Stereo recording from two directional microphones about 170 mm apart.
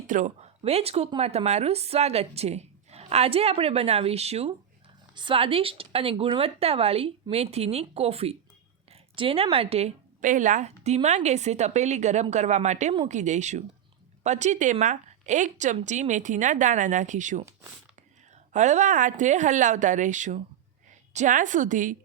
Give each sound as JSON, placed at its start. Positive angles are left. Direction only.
{"t": 0.1, "sound": "a woman's voice", "side_deg": -50}
{"t": 0.6, "sound": "a woman's voice", "side_deg": -35}
{"t": 18.5, "sound": "a woman's voice", "side_deg": -45}